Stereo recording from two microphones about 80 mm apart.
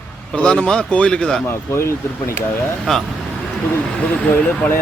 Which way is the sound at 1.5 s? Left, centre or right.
Left.